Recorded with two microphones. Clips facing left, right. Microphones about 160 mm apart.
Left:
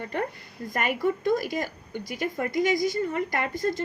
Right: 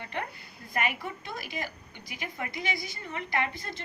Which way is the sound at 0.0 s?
45° left (ahead or behind).